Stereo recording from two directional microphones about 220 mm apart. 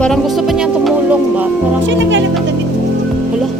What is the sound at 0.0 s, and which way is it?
Music, centre (ahead or behind).